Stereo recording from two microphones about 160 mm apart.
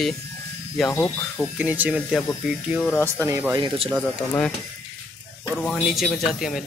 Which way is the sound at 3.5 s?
30° right (ahead or behind).